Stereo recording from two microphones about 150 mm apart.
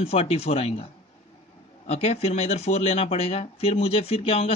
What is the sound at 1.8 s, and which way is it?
Speech, 45° left (ahead or behind).